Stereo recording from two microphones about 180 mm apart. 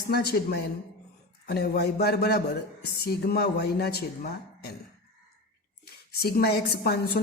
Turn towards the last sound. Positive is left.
turn(degrees=65)  # may be behind; listen again after turning